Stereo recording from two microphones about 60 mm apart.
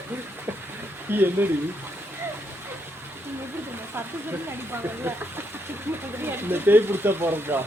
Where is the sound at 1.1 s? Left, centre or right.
Right.